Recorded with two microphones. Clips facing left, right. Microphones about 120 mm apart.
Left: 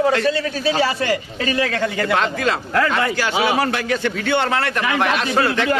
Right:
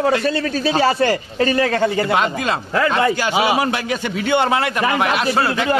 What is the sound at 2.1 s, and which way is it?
A man's voice, 20° right (ahead or behind).